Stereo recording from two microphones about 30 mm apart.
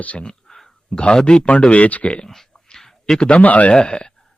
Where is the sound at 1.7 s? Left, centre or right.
Left.